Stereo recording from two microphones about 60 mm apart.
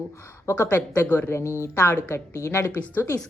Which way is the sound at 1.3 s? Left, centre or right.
Left.